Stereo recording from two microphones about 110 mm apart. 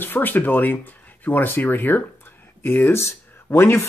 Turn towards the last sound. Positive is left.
turn(degrees=25)  # may be behind; listen again after turning